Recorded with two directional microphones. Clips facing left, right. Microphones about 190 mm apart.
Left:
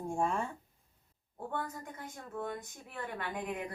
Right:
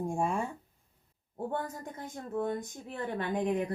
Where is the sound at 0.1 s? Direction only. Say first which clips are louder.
Left 2 dB; 10° right (ahead or behind).